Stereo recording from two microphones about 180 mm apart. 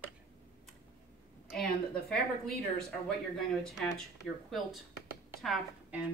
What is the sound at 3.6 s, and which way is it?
Speech, centre (ahead or behind).